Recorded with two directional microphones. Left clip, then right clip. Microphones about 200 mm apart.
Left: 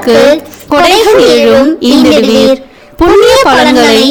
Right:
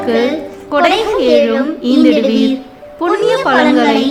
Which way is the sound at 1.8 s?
50° left (ahead or behind).